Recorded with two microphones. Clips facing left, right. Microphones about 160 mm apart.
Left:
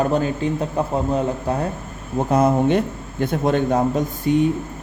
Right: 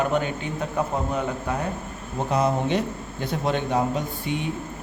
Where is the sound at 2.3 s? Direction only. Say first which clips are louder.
Left 6 dB; 50° left (ahead or behind).